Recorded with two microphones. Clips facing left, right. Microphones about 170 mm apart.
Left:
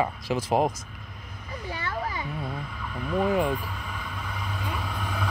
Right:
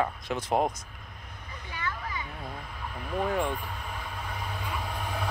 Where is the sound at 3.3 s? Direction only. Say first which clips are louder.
Left 4 dB; 5° left (ahead or behind).